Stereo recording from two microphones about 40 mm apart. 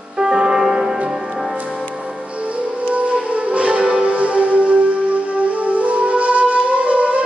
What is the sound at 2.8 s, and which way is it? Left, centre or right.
Music, right.